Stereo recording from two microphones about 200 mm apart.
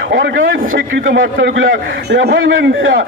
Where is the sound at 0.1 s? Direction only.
65° right (ahead or behind).